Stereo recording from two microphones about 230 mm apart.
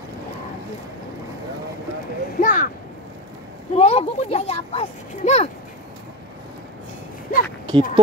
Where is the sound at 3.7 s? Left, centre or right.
Left.